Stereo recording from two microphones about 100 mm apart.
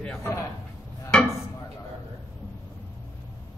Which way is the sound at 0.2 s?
30° left (ahead or behind).